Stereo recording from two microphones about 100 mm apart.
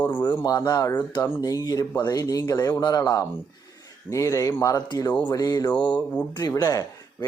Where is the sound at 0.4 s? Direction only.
40° left (ahead or behind).